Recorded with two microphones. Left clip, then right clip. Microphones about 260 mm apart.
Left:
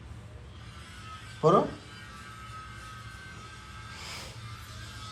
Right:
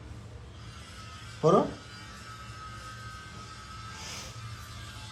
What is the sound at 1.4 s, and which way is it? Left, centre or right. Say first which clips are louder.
Speech: left 1 dB; centre.